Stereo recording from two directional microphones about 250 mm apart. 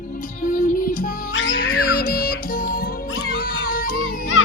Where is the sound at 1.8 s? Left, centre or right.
Left.